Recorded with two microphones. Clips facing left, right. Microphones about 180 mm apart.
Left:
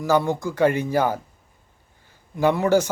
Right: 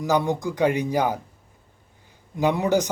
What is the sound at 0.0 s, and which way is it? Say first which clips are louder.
Speech: left 2 dB; 15° right (ahead or behind).